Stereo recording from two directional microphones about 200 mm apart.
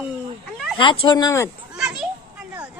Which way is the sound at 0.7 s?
25° left (ahead or behind).